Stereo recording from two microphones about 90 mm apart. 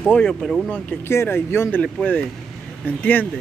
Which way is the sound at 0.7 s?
25° left (ahead or behind).